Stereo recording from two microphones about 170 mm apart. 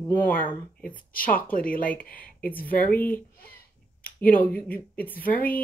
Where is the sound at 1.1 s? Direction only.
55° left (ahead or behind).